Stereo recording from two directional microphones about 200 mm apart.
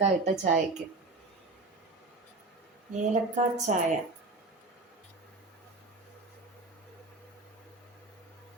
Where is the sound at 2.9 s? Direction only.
40° right (ahead or behind).